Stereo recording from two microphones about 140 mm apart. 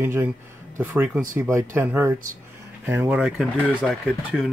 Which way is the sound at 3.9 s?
Centre (ahead or behind).